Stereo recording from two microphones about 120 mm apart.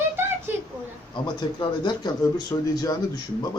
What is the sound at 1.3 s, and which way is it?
Speech, 40° left (ahead or behind).